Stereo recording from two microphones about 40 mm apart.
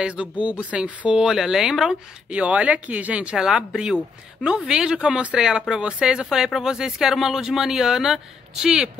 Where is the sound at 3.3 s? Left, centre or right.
Centre.